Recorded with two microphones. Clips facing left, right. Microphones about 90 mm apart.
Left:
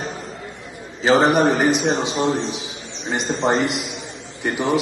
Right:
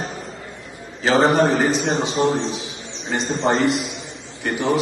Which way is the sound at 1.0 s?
20° left (ahead or behind).